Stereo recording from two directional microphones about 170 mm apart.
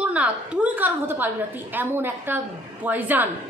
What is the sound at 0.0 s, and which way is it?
A woman's voice, 10° right (ahead or behind).